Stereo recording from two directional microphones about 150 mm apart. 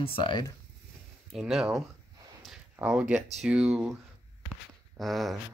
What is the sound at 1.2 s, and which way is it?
Speech, centre (ahead or behind).